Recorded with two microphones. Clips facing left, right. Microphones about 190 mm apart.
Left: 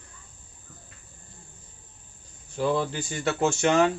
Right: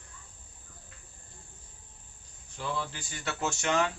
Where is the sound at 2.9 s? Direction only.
20° left (ahead or behind).